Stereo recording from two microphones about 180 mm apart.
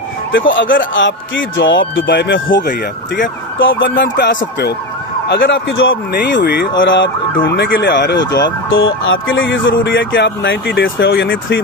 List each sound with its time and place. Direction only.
0.3 s speech: 90° left; by 2.7 s 75° left (ahead or behind)
3.2 s speech: 90° left
5.3 s speech: 90° left
7.4 s speech: 70° left (ahead or behind)
8.7 s speech: 90° left
11.3 s speech: 75° left (ahead or behind)